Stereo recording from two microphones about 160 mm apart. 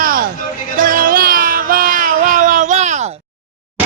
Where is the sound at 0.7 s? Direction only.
60° right (ahead or behind).